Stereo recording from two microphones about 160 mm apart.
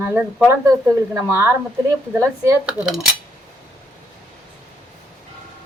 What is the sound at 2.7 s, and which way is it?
Speech, 5° right (ahead or behind).